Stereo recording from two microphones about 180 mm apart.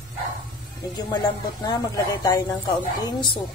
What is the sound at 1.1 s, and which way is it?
Speech, 20° left (ahead or behind).